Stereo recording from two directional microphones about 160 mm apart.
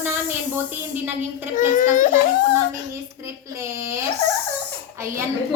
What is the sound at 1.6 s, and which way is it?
Speech, 55° left (ahead or behind).